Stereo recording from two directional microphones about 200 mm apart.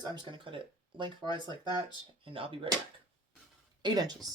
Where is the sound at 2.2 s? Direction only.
25° right (ahead or behind).